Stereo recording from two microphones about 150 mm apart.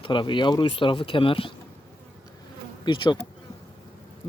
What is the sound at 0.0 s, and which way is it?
Speech, 35° left (ahead or behind).